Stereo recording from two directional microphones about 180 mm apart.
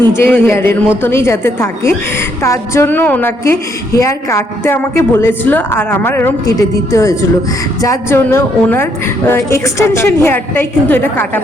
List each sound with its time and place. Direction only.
0.2 s a woman's voice: 10° left (ahead or behind)